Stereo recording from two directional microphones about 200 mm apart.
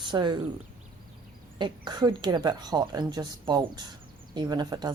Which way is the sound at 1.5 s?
20° right (ahead or behind).